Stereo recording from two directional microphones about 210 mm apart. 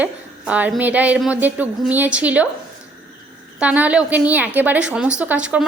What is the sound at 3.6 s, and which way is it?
A woman's voice, 5° right (ahead or behind).